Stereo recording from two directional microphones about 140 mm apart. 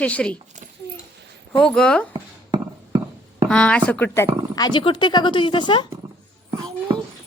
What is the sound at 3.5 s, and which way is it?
Speech, 10° left (ahead or behind).